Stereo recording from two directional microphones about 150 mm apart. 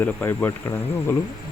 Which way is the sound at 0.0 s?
10° left (ahead or behind).